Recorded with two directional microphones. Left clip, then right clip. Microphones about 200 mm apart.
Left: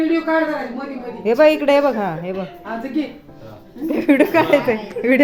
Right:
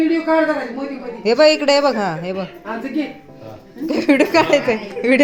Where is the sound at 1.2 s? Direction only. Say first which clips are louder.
Right 1 dB; centre (ahead or behind).